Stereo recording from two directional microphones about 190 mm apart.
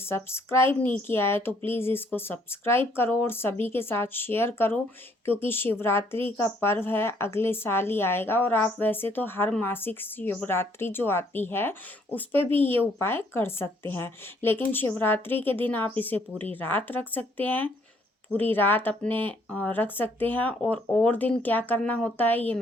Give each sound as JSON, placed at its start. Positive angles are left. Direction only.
{"t": 0.1, "sound": "a woman's voice", "side_deg": 15}
{"t": 12.5, "sound": "speech", "side_deg": -30}
{"t": 13.0, "sound": "a woman's voice", "side_deg": 10}